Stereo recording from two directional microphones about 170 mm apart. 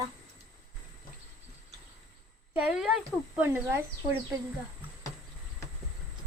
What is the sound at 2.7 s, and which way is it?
A woman's voice, 5° right (ahead or behind).